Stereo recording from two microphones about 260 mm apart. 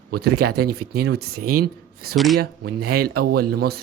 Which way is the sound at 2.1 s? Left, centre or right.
Centre.